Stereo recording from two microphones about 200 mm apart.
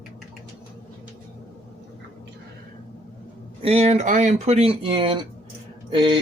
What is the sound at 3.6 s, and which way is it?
Speech, 30° right (ahead or behind).